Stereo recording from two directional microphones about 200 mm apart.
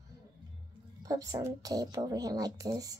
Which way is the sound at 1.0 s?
15° right (ahead or behind).